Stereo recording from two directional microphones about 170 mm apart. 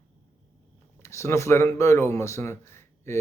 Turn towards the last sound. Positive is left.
turn(degrees=15)  # may be behind; listen again after turning